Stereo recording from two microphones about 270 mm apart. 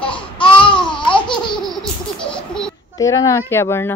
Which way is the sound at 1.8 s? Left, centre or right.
Centre.